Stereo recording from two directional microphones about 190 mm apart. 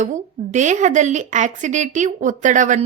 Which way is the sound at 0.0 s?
40° right (ahead or behind).